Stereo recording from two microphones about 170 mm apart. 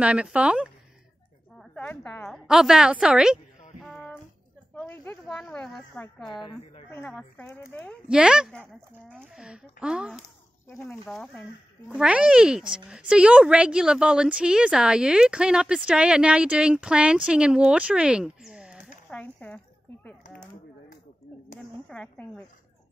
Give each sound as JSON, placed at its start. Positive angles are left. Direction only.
{"t": 0.0, "sound": "speech", "side_deg": -5}
{"t": 1.6, "sound": "a sound", "side_deg": 10}
{"t": 2.3, "sound": "speech", "side_deg": -5}
{"t": 3.8, "sound": "music", "side_deg": 0}
{"t": 4.8, "sound": "a sound", "side_deg": 10}
{"t": 5.2, "sound": "a woman's voice", "side_deg": 0}
{"t": 8.1, "sound": "speech", "side_deg": -5}
{"t": 10.7, "sound": "speech", "side_deg": 5}
{"t": 12.0, "sound": "speech", "side_deg": -5}
{"t": 19.0, "sound": "speech", "side_deg": 10}
{"t": 21.8, "sound": "speech", "side_deg": 5}